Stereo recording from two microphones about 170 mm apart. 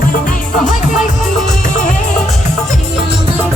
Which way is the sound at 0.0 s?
50° left (ahead or behind).